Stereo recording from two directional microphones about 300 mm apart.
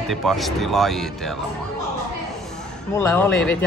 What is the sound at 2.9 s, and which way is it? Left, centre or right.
Speech, centre.